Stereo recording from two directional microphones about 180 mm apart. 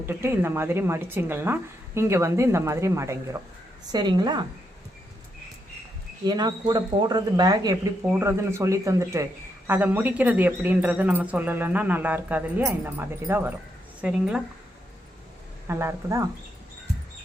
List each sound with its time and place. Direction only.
0.0 s speech: 15° right (ahead or behind)
6.2 s a woman's voice: 25° right (ahead or behind); by 14.4 s 5° right (ahead or behind)
15.6 s speech: 15° right (ahead or behind)